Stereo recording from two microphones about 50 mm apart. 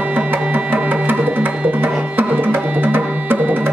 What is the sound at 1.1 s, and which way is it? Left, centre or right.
Music, right.